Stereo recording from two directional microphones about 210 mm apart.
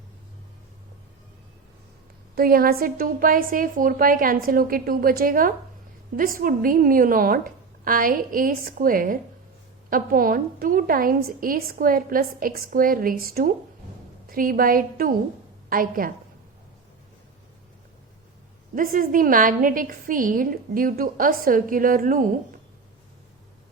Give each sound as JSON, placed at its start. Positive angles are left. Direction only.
{"t": 2.3, "sound": "a woman's voice", "side_deg": -45}
{"t": 18.7, "sound": "a woman's voice", "side_deg": -40}